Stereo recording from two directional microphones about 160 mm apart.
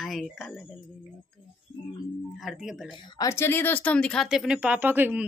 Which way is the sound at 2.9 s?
25° left (ahead or behind).